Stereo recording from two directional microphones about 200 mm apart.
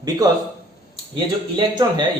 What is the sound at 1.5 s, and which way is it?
Speech, 20° right (ahead or behind).